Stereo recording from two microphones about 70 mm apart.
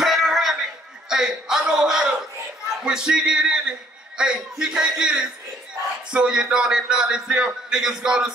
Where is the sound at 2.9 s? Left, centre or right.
Centre.